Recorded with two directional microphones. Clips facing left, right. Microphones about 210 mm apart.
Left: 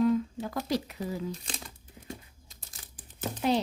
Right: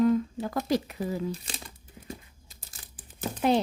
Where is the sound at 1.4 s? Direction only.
5° right (ahead or behind).